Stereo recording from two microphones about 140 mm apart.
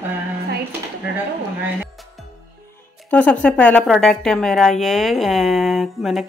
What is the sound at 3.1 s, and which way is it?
A woman's voice, 10° left (ahead or behind).